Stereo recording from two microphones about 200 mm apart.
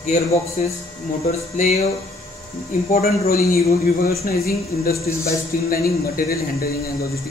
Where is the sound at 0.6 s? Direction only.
40° left (ahead or behind).